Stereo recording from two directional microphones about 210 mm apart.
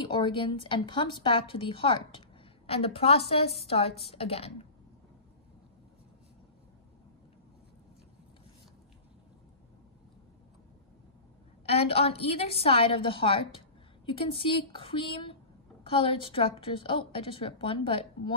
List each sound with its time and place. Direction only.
0.0 s a woman's voice: 25° left (ahead or behind)
11.6 s a woman's voice: 30° left (ahead or behind)